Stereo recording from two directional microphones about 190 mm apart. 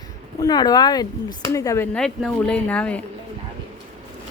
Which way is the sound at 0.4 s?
20° left (ahead or behind).